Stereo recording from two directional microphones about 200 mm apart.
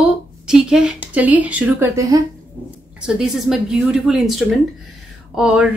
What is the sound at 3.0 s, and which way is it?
Speech, centre (ahead or behind).